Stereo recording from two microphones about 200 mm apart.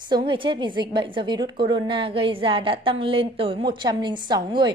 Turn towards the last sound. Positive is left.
turn(degrees=-20)  # may be behind; listen again after turning